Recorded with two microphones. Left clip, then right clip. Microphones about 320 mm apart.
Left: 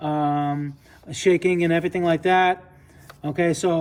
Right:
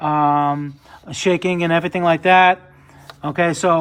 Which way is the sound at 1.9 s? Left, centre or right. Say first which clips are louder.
Right 9 dB; right.